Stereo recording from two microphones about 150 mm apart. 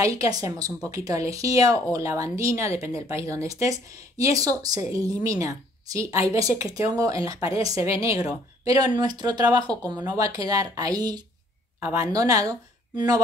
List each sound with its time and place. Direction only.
0.0 s speech: 25° right (ahead or behind)